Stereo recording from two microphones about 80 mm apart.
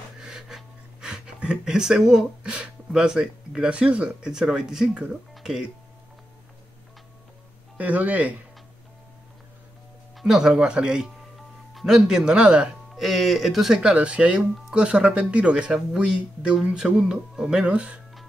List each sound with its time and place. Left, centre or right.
0.2 s speech: centre
7.7 s speech: centre
10.1 s speech: centre
13.0 s speech: centre
13.9 s speech: centre